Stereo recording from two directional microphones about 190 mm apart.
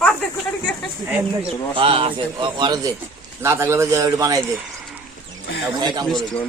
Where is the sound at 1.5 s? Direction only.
30° right (ahead or behind).